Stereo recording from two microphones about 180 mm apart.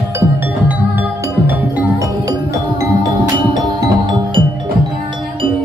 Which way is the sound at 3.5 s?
25° right (ahead or behind).